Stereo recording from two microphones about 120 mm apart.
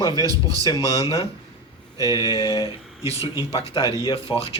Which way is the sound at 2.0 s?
30° right (ahead or behind).